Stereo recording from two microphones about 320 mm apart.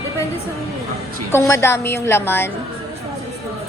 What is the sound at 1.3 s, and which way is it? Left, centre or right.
Speech, centre.